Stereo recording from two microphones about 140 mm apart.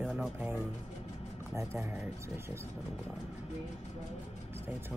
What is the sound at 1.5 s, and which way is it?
Speech, 20° right (ahead or behind).